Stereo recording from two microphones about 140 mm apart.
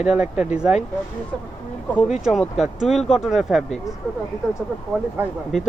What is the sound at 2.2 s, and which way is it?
Speech, centre (ahead or behind).